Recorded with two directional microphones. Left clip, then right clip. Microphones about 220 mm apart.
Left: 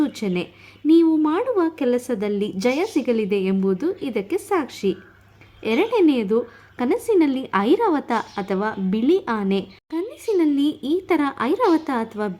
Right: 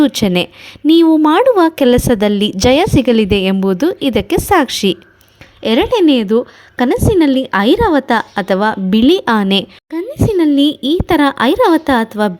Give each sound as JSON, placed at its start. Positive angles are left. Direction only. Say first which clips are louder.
{"t": 0.0, "sound": "a woman's voice", "louder": "right 11 dB", "side_deg": -40}